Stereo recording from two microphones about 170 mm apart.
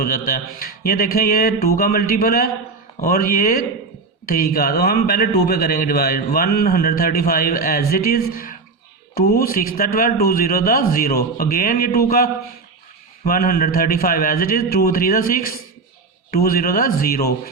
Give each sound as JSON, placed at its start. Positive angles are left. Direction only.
{"t": 0.0, "sound": "a man's voice", "side_deg": 60}